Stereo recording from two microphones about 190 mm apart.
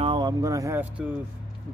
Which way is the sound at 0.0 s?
25° right (ahead or behind).